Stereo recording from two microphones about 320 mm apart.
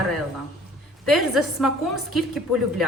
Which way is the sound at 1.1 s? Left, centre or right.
Centre.